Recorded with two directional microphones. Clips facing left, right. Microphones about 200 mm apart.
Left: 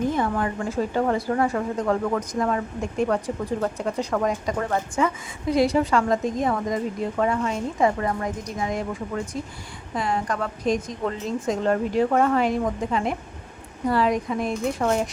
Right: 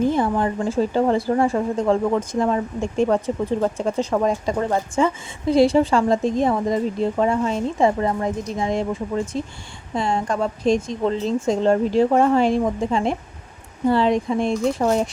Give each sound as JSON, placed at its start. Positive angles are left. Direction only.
{"t": 0.1, "sound": "speech", "side_deg": -30}